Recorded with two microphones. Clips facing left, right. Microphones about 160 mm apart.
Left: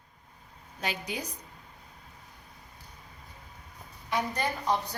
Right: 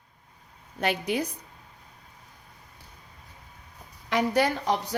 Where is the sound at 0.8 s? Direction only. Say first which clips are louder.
Right 8 dB; 60° right (ahead or behind).